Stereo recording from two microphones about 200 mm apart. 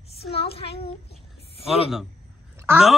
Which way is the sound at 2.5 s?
10° right (ahead or behind).